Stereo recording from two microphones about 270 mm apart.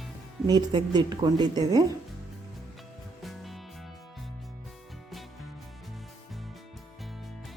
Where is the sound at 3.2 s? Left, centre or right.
Centre.